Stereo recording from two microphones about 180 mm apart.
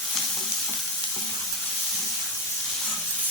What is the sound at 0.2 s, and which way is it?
Stir, centre (ahead or behind).